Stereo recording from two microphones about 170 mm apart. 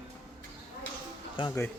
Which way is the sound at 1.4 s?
30° left (ahead or behind).